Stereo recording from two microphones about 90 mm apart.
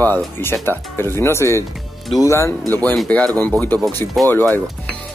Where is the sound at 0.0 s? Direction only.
25° left (ahead or behind).